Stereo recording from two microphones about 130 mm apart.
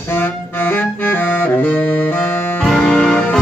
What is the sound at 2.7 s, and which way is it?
Music, 5° left (ahead or behind).